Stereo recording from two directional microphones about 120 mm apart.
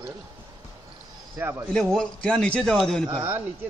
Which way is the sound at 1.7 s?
5° left (ahead or behind).